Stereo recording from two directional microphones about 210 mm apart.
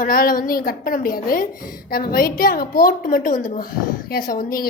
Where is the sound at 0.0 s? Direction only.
45° left (ahead or behind).